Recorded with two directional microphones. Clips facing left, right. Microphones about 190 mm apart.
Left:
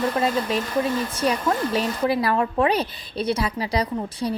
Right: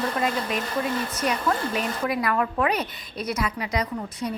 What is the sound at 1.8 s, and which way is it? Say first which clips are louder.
A woman's voice: left 4 dB; 30° left (ahead or behind).